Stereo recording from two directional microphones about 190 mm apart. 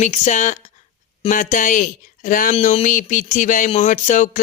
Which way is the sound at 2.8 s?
45° left (ahead or behind).